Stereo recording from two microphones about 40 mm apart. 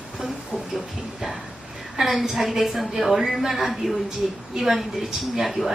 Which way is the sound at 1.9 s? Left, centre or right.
Centre.